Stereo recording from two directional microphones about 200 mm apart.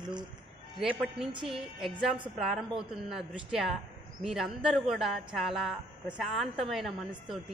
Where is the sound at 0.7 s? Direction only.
5° right (ahead or behind).